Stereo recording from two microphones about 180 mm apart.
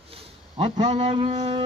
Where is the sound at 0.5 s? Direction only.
25° right (ahead or behind).